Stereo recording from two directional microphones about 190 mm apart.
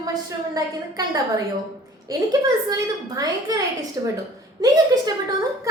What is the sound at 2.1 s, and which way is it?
A child's voice, 20° right (ahead or behind).